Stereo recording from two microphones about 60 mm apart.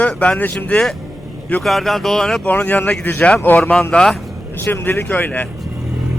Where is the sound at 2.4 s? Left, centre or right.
Left.